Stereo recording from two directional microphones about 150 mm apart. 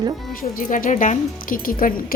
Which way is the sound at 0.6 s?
65° left (ahead or behind).